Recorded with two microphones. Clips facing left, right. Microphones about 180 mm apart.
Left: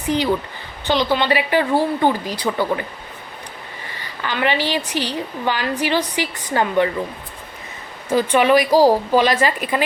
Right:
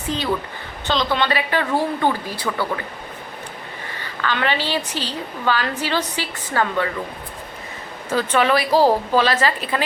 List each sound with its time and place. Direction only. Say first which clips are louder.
0.1 s a woman's voice: left 4 dB; 15° left (ahead or behind)
4.0 s a woman's voice: left 1 dB; 15° left (ahead or behind)
8.1 s a woman's voice: left 4 dB; 15° left (ahead or behind)